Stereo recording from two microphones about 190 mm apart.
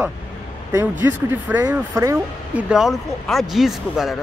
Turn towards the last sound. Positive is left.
turn(degrees=0)  # may be behind; listen again after turning